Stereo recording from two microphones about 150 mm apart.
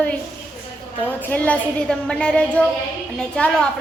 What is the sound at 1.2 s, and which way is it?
A woman's voice, 10° left (ahead or behind).